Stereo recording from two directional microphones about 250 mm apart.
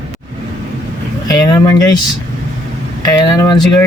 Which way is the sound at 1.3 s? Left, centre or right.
Centre.